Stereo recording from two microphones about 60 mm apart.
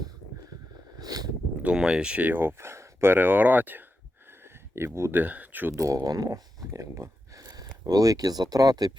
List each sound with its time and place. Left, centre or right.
0.9 s a sound: right
1.6 s speech: centre
2.2 s speech: right
4.3 s a sound: right
5.1 s speech: right
5.7 s speech: right
7.3 s speech: right